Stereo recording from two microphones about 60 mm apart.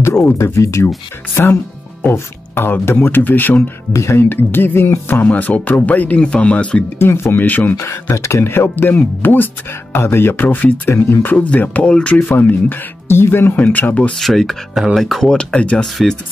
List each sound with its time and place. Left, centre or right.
0.0 s music: left
0.4 s speech: left
2.1 s speech: left
3.9 s speech: left
4.3 s speech: left
5.3 s speech: left
7.0 s speech: left
7.4 s speech: left
7.7 s speech: left; by 12.2 s centre
12.2 s speech: left
13.6 s speech: left
14.1 s speech: centre
15.3 s speech: centre
15.8 s speech: centre